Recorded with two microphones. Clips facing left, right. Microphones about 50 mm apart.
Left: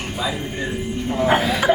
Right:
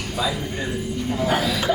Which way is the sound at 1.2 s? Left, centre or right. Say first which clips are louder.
Left 5 dB; left.